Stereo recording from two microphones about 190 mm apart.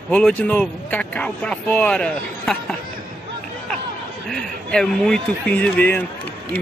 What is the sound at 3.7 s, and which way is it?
Chatter, centre (ahead or behind).